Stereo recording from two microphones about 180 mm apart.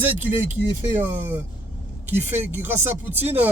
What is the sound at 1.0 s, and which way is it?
Speech, 10° right (ahead or behind).